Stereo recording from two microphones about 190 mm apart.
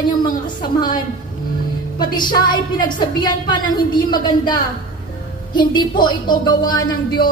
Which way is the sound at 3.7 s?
25° left (ahead or behind).